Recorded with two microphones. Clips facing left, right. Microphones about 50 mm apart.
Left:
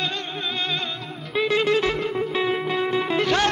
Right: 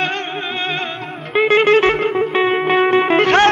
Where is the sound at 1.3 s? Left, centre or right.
Right.